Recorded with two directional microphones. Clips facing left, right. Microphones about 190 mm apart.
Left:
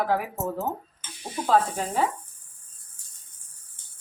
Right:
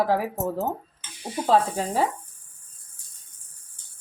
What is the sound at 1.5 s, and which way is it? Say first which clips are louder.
Speech: right 1 dB; 30° right (ahead or behind).